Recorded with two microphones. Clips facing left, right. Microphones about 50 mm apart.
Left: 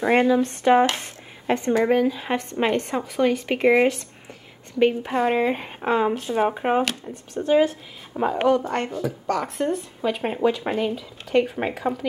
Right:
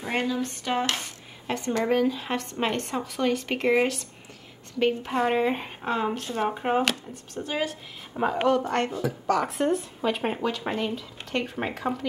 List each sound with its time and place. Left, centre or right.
0.1 s speech: left
1.7 s a woman's voice: centre
8.2 s speech: centre
10.4 s a woman's voice: centre